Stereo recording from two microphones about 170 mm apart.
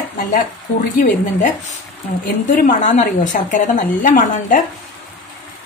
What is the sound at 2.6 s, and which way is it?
A woman's voice, 50° left (ahead or behind).